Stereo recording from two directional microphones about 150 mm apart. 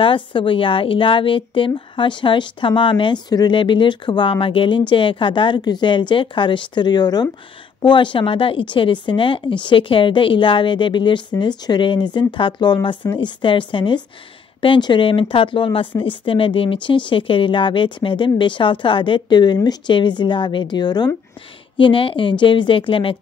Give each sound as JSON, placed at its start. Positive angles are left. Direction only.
{"t": 0.0, "sound": "a woman's voice", "side_deg": 35}